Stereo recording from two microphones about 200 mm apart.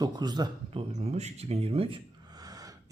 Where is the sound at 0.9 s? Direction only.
35° right (ahead or behind).